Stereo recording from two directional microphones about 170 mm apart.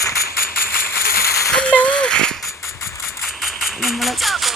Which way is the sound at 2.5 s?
15° left (ahead or behind).